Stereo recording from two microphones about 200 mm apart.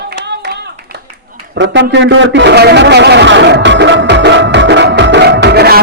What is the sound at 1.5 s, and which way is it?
A man's voice, 60° right (ahead or behind).